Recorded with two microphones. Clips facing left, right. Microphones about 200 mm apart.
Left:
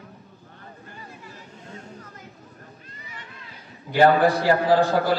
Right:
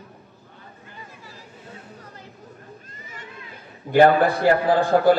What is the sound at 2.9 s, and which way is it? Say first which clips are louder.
Children playing: right 1 dB; 45° right (ahead or behind).